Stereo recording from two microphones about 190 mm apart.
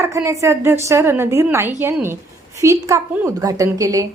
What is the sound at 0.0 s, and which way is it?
A woman's voice, 15° right (ahead or behind).